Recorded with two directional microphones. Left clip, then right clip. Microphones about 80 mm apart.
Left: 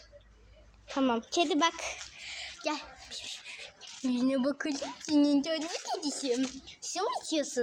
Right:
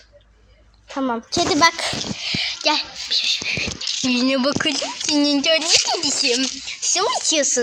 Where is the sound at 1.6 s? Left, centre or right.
Centre.